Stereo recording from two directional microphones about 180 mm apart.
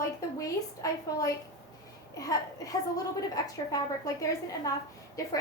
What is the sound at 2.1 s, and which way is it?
A woman's voice, 20° left (ahead or behind).